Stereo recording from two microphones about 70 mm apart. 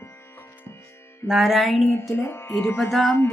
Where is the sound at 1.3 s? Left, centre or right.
Centre.